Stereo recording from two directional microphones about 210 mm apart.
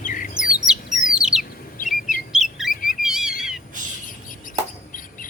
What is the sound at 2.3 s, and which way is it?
Bird, centre (ahead or behind).